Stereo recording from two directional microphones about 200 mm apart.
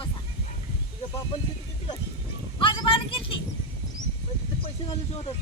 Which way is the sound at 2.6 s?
25° left (ahead or behind).